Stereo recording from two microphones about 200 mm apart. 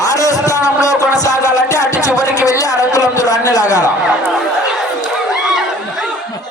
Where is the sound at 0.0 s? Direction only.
15° left (ahead or behind).